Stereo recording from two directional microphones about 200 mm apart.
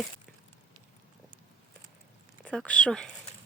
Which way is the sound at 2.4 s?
5° left (ahead or behind).